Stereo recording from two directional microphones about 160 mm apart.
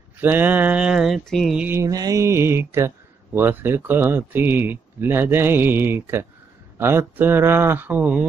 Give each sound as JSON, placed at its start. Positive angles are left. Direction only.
{"t": 0.2, "sound": "speech", "side_deg": -10}
{"t": 1.7, "sound": "speech", "side_deg": -20}